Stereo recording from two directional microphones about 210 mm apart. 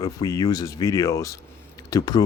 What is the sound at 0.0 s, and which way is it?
Speech, 15° left (ahead or behind).